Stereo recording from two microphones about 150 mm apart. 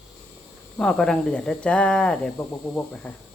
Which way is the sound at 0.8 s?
5° left (ahead or behind).